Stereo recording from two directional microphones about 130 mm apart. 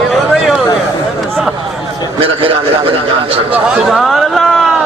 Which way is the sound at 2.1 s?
45° right (ahead or behind).